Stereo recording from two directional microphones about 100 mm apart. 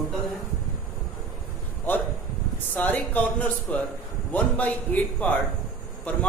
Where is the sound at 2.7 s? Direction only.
15° left (ahead or behind).